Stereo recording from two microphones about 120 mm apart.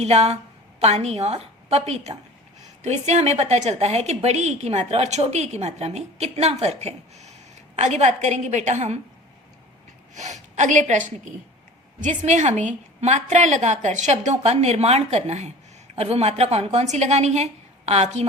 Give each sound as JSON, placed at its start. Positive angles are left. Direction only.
{"t": 0.0, "sound": "a woman's voice", "side_deg": -65}
{"t": 10.2, "sound": "a woman's voice", "side_deg": -75}